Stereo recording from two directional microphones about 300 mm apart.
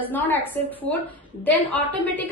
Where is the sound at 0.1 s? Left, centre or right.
Centre.